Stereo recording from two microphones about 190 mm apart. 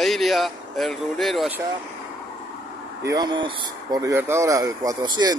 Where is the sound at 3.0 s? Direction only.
20° right (ahead or behind).